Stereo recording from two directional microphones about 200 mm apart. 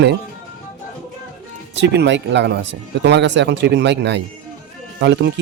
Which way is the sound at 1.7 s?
60° right (ahead or behind).